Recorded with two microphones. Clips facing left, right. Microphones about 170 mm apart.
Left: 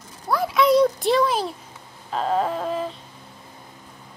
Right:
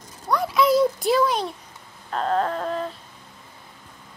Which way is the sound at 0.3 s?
Centre (ahead or behind).